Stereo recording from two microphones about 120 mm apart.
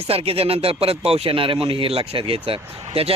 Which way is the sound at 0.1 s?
50° right (ahead or behind).